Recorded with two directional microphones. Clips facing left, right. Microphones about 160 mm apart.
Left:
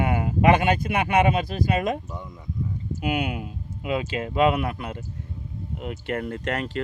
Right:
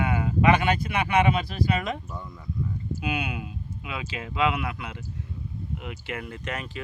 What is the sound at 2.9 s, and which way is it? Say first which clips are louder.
Speech: left 6 dB; 20° left (ahead or behind).